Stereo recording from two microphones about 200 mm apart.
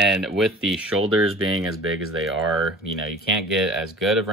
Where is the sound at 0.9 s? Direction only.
90° right.